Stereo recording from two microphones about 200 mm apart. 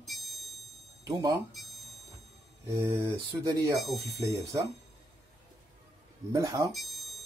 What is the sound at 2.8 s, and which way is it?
Speech, 15° right (ahead or behind).